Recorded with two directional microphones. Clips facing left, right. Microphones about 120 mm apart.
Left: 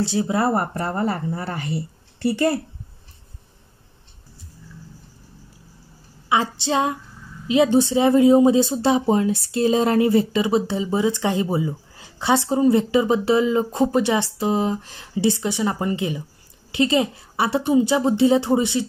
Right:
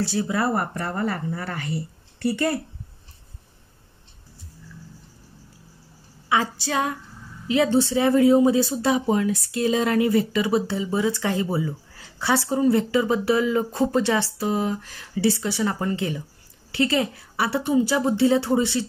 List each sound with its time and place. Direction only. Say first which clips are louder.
0.0 s speech: left 3 dB; 20° left (ahead or behind)
6.2 s a woman's voice: left 2 dB; 20° left (ahead or behind)